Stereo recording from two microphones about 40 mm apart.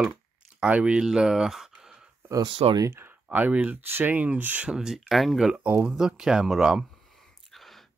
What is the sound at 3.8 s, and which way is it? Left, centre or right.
Speech, right.